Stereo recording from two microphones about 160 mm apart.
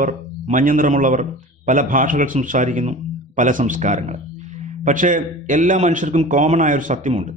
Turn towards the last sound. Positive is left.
turn(degrees=-50)  # may be behind; listen again after turning